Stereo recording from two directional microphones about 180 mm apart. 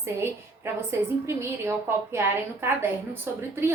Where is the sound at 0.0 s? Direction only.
15° right (ahead or behind).